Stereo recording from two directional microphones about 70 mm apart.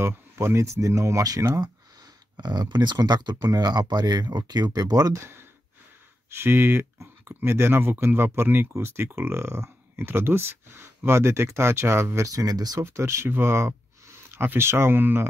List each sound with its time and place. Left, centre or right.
0.0 s speech: right
2.3 s speech: right
6.3 s speech: right
12.3 s speech: right
12.8 s speech: right